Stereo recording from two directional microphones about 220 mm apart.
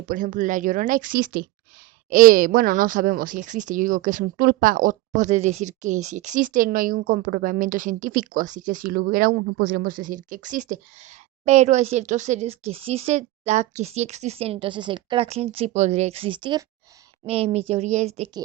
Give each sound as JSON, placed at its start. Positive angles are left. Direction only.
{"t": 0.1, "sound": "speech", "side_deg": -35}